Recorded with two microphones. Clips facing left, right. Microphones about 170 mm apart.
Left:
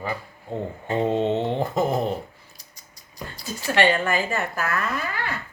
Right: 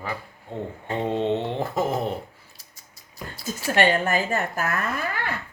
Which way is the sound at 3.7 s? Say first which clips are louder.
Even; 45° right (ahead or behind).